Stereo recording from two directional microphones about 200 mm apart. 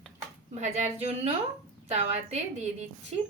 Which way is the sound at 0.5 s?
35° right (ahead or behind).